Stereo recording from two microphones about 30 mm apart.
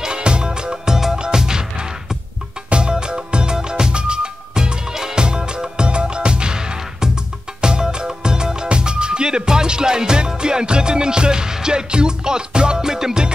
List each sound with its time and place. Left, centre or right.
0.0 s music: right